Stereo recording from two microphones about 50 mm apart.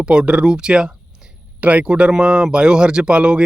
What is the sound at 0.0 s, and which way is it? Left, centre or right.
Speech, centre.